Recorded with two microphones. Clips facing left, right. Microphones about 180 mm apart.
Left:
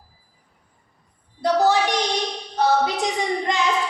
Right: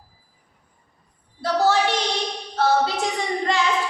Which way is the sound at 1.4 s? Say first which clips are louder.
Left 1 dB; 15° left (ahead or behind).